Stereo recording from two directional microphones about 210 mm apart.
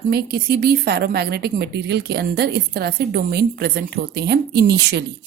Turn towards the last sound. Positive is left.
turn(degrees=-50)  # may be behind; listen again after turning